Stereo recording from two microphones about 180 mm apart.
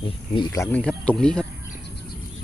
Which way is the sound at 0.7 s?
5° left (ahead or behind).